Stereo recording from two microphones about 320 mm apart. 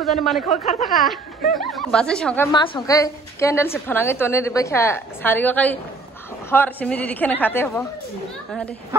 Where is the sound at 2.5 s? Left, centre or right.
Centre.